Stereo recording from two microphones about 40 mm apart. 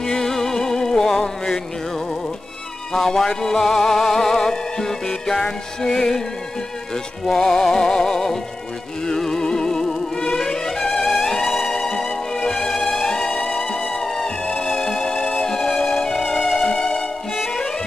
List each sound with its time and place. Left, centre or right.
0.0 s music: centre
2.9 s music: centre
7.2 s music: centre
14.5 s music: left
15.4 s music: centre